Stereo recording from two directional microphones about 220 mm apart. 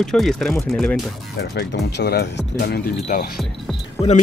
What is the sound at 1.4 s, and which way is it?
Speech, 50° left (ahead or behind).